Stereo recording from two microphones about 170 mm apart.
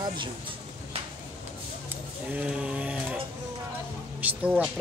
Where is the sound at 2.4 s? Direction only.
5° right (ahead or behind).